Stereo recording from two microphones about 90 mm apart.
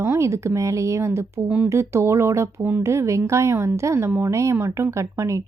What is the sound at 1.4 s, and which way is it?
Speech, 15° right (ahead or behind).